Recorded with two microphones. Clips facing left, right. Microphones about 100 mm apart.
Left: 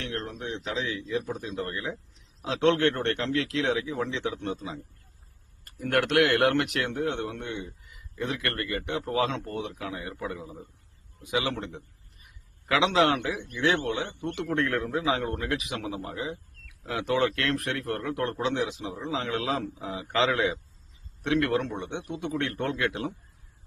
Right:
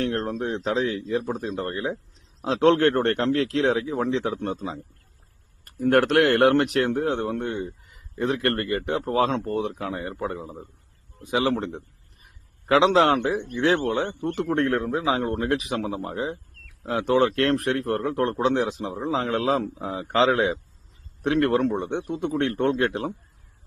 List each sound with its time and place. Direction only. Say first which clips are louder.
0.0 s a man's voice: right 9 dB; 35° right (ahead or behind)
5.8 s a man's voice: right 5 dB; 35° right (ahead or behind)
12.2 s a sound: right 4 dB; 35° right (ahead or behind)
13.4 s a man's voice: right 4 dB; 40° right (ahead or behind)